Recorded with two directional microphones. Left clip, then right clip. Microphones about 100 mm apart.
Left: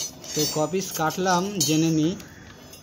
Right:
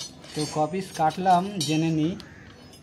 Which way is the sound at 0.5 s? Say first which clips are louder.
Left 1 dB; 35° right (ahead or behind).